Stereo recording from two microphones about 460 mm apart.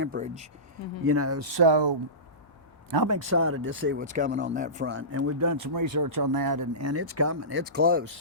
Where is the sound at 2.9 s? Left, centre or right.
Right.